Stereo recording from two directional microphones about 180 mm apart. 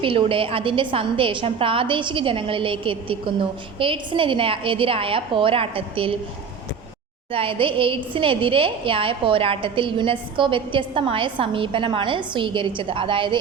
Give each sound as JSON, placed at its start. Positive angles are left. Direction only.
{"t": 0.0, "sound": "a woman's voice", "side_deg": -30}
{"t": 7.3, "sound": "a woman's voice", "side_deg": -30}